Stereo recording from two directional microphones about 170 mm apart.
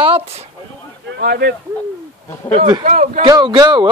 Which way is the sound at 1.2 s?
65° right (ahead or behind).